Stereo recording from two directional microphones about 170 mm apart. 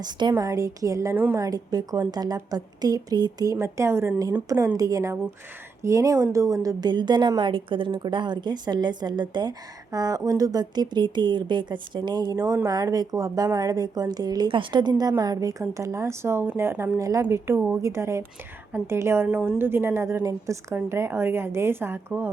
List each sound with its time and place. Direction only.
0.0 s a woman's voice: 25° right (ahead or behind)